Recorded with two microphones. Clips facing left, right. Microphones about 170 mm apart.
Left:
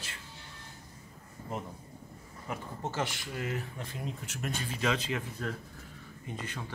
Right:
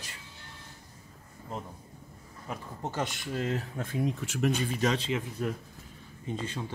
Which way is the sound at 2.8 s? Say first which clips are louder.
Right 2 dB; 20° right (ahead or behind).